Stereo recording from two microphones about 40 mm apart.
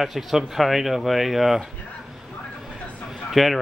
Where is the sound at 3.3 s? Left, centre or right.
Centre.